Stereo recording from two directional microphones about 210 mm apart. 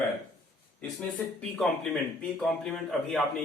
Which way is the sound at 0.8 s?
Centre (ahead or behind).